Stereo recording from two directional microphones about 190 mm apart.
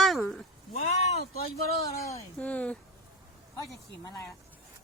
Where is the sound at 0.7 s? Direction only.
35° left (ahead or behind).